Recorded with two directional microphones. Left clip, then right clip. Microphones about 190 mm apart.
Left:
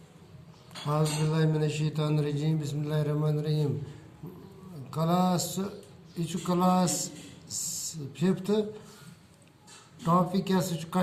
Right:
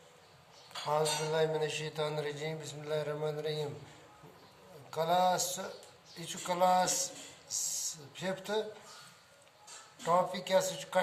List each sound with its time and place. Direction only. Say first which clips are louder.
0.9 s a man's voice: left 1 dB; centre (ahead or behind)
4.9 s a man's voice: even; centre (ahead or behind)
10.3 s a man's voice: even; 5° left (ahead or behind)